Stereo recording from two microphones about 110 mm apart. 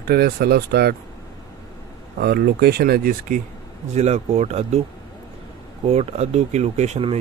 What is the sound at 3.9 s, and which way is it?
Speech, 90° right.